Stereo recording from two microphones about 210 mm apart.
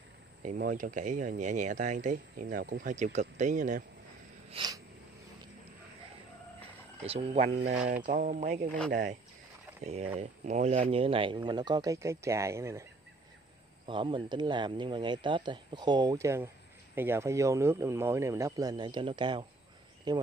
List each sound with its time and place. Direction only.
0.4 s speech: 40° right (ahead or behind)
4.5 s a sound: 20° right (ahead or behind)
7.0 s speech: 30° right (ahead or behind)
9.8 s speech: 30° right (ahead or behind); by 12.8 s 15° right (ahead or behind)
13.8 s speech: 25° right (ahead or behind)